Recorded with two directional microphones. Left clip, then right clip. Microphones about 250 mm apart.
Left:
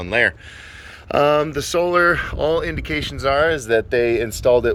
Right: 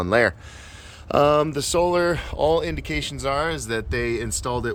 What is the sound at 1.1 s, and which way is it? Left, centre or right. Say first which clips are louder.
Speech: left 2 dB; centre.